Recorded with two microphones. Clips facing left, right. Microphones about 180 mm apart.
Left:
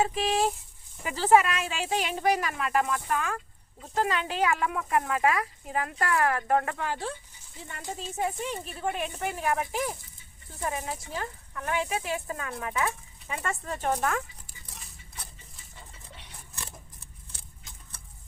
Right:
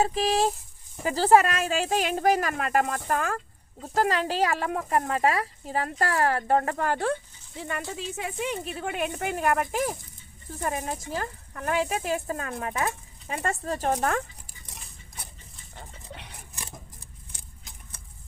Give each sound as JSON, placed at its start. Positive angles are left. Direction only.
{"t": 0.0, "sound": "speech", "side_deg": -40}
{"t": 7.6, "sound": "speech", "side_deg": -85}
{"t": 15.7, "sound": "a sound", "side_deg": -60}